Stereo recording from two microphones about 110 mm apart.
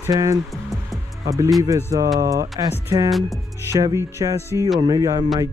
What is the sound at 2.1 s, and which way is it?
Speech, 30° right (ahead or behind).